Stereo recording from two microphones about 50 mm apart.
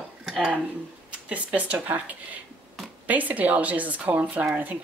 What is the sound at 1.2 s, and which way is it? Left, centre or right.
Speech, right.